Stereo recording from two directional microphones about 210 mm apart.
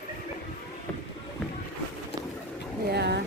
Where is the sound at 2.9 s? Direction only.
50° right (ahead or behind).